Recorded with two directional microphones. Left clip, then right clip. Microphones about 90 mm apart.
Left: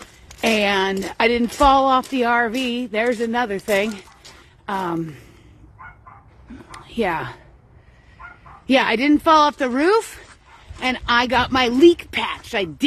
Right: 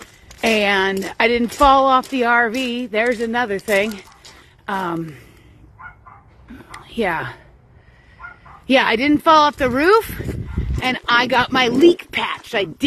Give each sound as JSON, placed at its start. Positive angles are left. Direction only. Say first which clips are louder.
{"t": 0.4, "sound": "speech", "louder": "right 2 dB", "side_deg": 35}
{"t": 3.0, "sound": "speech", "louder": "right 2 dB", "side_deg": 20}
{"t": 6.5, "sound": "a sound", "louder": "right 1 dB", "side_deg": 25}
{"t": 8.2, "sound": "bow-wow", "louder": "right 3 dB", "side_deg": -15}
{"t": 8.6, "sound": "speech", "louder": "right 2 dB", "side_deg": 20}
{"t": 10.3, "sound": "fowl", "louder": "right 11 dB", "side_deg": 5}
{"t": 11.5, "sound": "speech", "louder": "left 1 dB", "side_deg": 30}